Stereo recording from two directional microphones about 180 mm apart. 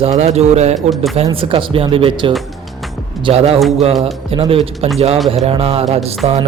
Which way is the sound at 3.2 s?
35° right (ahead or behind).